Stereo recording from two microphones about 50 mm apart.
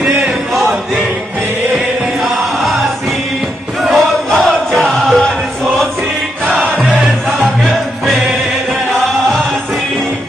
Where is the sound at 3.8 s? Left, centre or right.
Centre.